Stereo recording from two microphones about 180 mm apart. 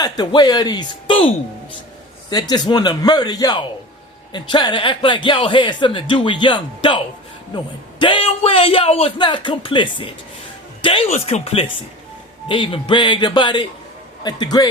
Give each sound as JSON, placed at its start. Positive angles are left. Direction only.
{"t": 0.0, "sound": "speech", "side_deg": 25}
{"t": 2.3, "sound": "speech", "side_deg": 20}